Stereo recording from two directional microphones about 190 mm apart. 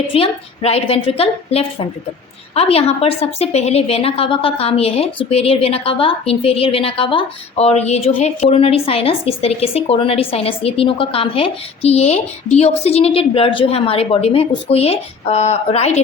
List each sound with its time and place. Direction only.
0.1 s a woman's voice: 30° left (ahead or behind)